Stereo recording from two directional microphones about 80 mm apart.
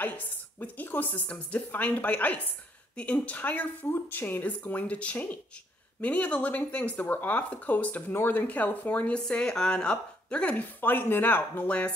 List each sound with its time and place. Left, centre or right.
0.6 s a woman's voice: left